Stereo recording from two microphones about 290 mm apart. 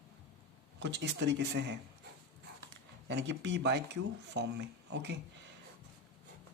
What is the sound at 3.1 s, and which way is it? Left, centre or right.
A man's voice, right.